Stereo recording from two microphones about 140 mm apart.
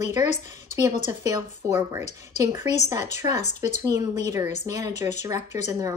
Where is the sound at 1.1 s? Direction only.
20° right (ahead or behind).